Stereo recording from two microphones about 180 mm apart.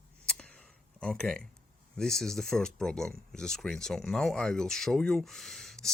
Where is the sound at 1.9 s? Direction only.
Centre (ahead or behind).